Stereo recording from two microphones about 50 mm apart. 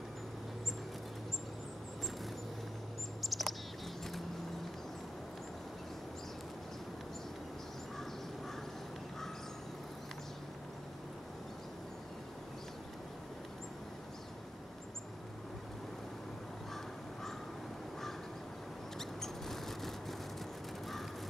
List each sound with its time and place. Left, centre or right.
3.2 s bird: centre
18.9 s mouse: centre